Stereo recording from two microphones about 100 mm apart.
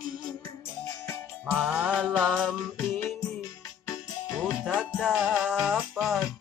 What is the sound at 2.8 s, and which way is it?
Music, 25° left (ahead or behind).